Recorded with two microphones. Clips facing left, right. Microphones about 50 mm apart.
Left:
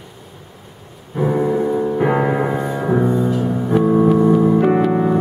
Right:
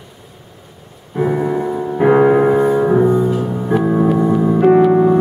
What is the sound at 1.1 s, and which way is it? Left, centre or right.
Piano, centre.